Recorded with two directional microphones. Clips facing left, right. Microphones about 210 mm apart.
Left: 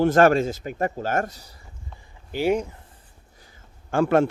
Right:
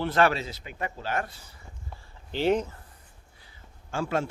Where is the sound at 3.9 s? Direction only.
55° left (ahead or behind).